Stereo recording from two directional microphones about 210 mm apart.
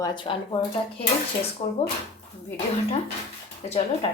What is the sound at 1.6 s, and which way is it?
Speech, 30° left (ahead or behind).